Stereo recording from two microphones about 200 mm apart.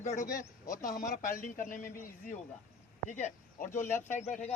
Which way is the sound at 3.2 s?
40° left (ahead or behind).